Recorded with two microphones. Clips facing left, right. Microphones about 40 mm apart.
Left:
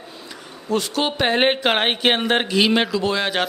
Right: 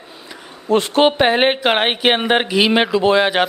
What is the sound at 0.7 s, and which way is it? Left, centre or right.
Speech, right.